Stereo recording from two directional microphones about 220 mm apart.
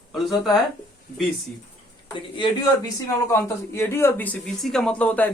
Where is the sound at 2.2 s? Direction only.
20° left (ahead or behind).